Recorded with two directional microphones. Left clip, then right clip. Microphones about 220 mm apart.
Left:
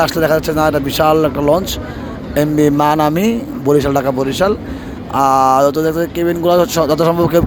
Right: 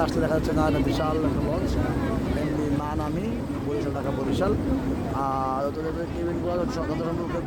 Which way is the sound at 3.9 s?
25° left (ahead or behind).